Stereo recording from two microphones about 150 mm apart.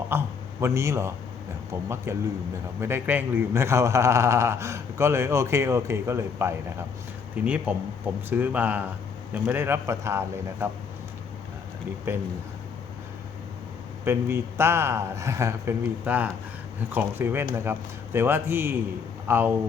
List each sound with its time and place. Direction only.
0.1 s a man's voice: 15° right (ahead or behind)
12.1 s a man's voice: 15° right (ahead or behind)
14.0 s a man's voice: 15° right (ahead or behind)